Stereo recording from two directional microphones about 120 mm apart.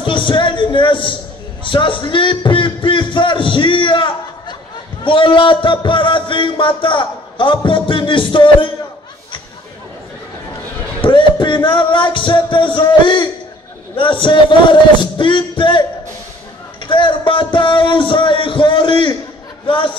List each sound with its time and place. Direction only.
0.0 s a man's voice: 45° left (ahead or behind)
11.0 s music: 45° left (ahead or behind)
13.9 s speech: 45° left (ahead or behind)
16.8 s speech: 45° left (ahead or behind)